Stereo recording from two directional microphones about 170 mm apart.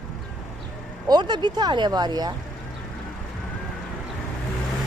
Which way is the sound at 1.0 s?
25° right (ahead or behind).